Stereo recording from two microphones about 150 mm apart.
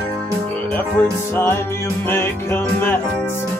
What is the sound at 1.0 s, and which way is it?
Music, 15° left (ahead or behind).